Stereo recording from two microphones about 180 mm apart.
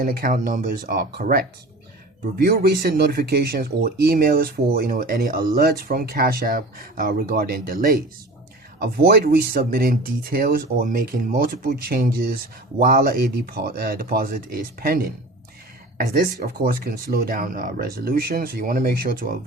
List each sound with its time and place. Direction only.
0.0 s speech: 50° right (ahead or behind)